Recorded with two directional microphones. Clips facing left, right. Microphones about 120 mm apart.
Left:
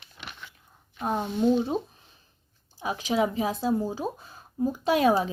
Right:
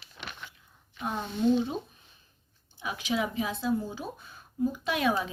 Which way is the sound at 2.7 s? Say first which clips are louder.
Left 5 dB; 40° left (ahead or behind).